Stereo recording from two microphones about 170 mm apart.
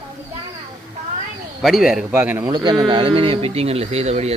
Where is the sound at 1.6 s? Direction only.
Centre (ahead or behind).